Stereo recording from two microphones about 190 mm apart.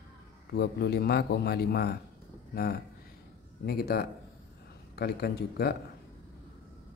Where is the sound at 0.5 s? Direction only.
60° left (ahead or behind).